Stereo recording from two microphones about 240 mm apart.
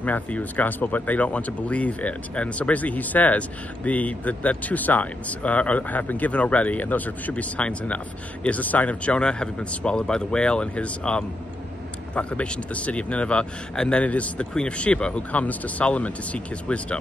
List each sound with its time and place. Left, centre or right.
0.0 s speech: centre